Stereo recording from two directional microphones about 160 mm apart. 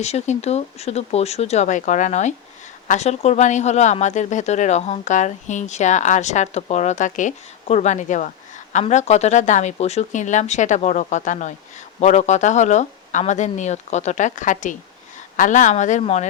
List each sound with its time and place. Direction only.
0.0 s speech: 45° left (ahead or behind)